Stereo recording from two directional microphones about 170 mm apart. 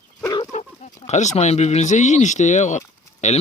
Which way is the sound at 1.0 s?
40° left (ahead or behind).